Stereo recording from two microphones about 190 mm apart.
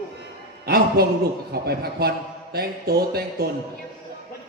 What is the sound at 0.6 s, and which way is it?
A man's voice, 55° right (ahead or behind).